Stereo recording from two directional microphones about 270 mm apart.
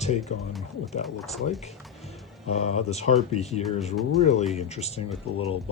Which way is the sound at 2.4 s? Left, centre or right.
Left.